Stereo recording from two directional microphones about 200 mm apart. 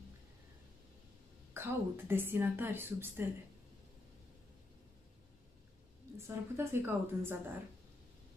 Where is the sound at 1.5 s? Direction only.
10° right (ahead or behind).